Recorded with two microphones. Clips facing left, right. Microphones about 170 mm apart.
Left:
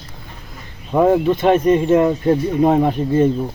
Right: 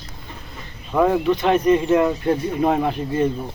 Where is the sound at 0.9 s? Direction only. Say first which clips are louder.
Left 3 dB; 25° left (ahead or behind).